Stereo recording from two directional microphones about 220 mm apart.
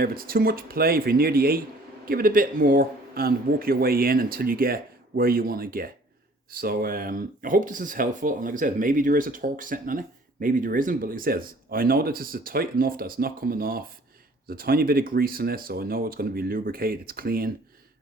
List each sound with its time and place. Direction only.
0.0 s a man's voice: 40° right (ahead or behind)